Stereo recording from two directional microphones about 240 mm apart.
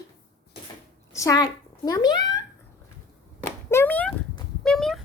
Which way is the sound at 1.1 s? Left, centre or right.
Centre.